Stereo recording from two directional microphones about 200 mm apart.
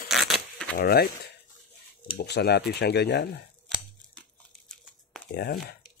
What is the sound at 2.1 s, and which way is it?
Speech, 55° left (ahead or behind).